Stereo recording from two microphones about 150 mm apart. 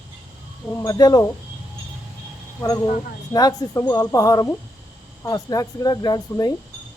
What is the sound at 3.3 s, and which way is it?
Speech, 25° left (ahead or behind).